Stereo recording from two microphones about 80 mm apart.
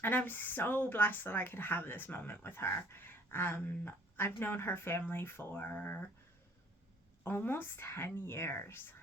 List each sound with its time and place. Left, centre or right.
0.0 s speech: left
7.3 s speech: left